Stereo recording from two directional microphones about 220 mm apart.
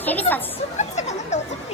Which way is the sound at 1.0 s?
30° left (ahead or behind).